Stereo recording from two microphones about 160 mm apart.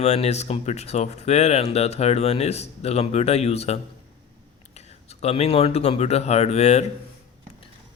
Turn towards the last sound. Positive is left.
turn(degrees=45)  # may be behind; listen again after turning